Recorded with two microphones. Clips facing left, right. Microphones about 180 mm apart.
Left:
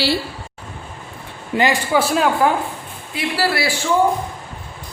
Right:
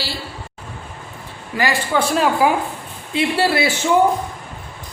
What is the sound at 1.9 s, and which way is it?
Speech, centre (ahead or behind).